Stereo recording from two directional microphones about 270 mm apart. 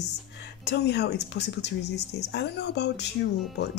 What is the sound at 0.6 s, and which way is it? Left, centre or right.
Speech, left.